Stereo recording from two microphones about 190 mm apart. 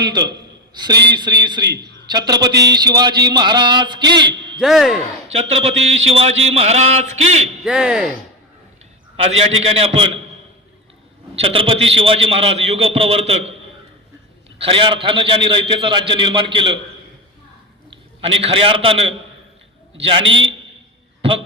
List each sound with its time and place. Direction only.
0.0 s a man's voice: 20° right (ahead or behind)
1.6 s a man's voice: 60° right (ahead or behind)
2.0 s a man's voice: 20° right (ahead or behind)
4.6 s speech: centre (ahead or behind)
5.3 s a man's voice: 35° right (ahead or behind)
7.6 s speech: 5° right (ahead or behind)
9.4 s a man's voice: 30° right (ahead or behind)
11.3 s a man's voice: 30° right (ahead or behind)
14.6 s a man's voice: 25° right (ahead or behind)
17.9 s a man's voice: 30° right (ahead or behind)
20.2 s a man's voice: 85° right